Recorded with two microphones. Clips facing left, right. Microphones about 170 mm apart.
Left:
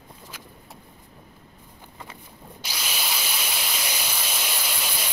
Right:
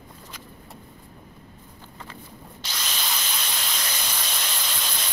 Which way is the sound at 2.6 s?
10° left (ahead or behind).